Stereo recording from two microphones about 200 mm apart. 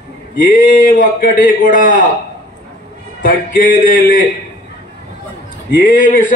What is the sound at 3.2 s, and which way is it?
Speech, 45° left (ahead or behind).